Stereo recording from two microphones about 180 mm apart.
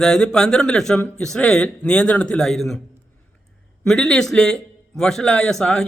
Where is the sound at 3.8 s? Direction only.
5° left (ahead or behind).